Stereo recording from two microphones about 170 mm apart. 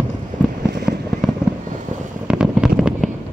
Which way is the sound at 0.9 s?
5° right (ahead or behind).